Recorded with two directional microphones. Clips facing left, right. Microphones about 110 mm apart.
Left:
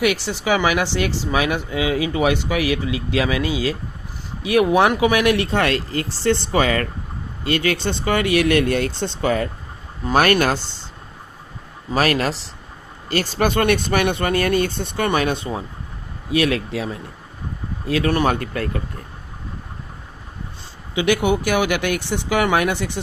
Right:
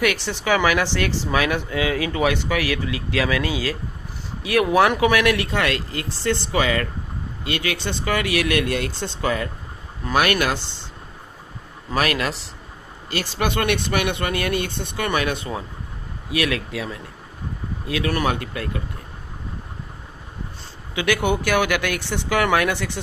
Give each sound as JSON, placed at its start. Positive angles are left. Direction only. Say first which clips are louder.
{"t": 0.0, "sound": "speech", "louder": "left 2 dB", "side_deg": 15}
{"t": 10.2, "sound": "speech", "louder": "left 3 dB", "side_deg": 40}
{"t": 11.9, "sound": "speech", "louder": "left 3 dB", "side_deg": 35}
{"t": 18.3, "sound": "speech", "louder": "left 3 dB", "side_deg": 50}
{"t": 20.9, "sound": "speech", "louder": "left 3 dB", "side_deg": 20}